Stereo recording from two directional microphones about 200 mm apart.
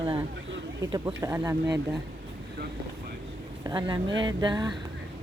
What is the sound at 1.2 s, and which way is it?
Speech, 15° right (ahead or behind).